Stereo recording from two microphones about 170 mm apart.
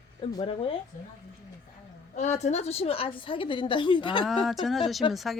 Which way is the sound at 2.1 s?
40° left (ahead or behind).